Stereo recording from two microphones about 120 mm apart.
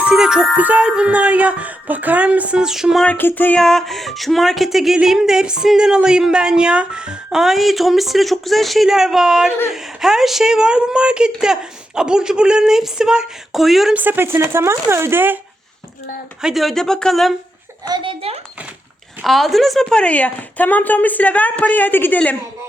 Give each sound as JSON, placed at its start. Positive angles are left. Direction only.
{"t": 0.0, "sound": "music", "side_deg": -5}
{"t": 3.0, "sound": "speech", "side_deg": 15}
{"t": 3.6, "sound": "music", "side_deg": 5}
{"t": 13.9, "sound": "speech", "side_deg": -15}
{"t": 16.4, "sound": "music", "side_deg": 0}
{"t": 17.8, "sound": "a child's voice", "side_deg": -40}
{"t": 19.2, "sound": "speech", "side_deg": 0}